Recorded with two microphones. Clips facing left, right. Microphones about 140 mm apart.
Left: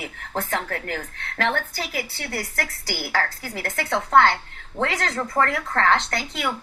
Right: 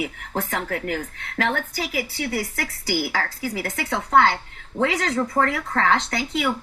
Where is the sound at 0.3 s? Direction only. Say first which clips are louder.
Even; 5° right (ahead or behind).